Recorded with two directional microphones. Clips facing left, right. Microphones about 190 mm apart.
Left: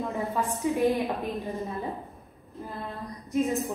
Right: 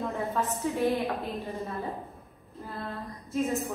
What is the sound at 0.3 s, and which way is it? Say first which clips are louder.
A woman's voice: left 2 dB; 15° left (ahead or behind).